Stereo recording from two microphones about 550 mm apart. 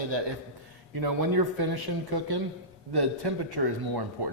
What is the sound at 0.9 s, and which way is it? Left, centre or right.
Speech, right.